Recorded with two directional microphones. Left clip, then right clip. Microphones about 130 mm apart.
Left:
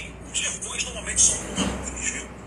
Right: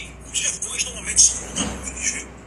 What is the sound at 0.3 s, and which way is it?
Vehicle, 40° right (ahead or behind).